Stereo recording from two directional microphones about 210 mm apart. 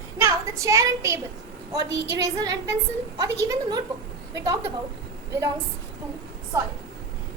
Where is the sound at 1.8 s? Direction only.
55° right (ahead or behind).